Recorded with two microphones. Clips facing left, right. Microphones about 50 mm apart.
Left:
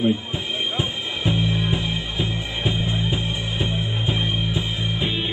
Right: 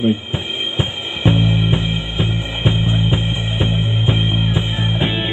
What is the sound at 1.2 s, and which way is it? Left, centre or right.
Music, right.